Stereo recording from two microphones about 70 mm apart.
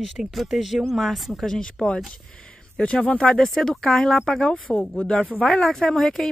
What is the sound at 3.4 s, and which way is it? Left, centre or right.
Speech, centre.